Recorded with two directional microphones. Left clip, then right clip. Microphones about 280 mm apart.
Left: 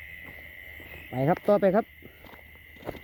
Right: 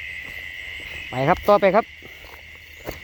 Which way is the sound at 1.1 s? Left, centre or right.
Centre.